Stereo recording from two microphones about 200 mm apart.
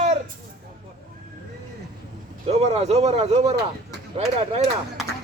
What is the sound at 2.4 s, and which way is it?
Speech, 30° right (ahead or behind).